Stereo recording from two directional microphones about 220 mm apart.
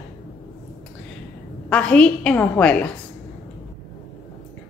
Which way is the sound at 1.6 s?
5° left (ahead or behind).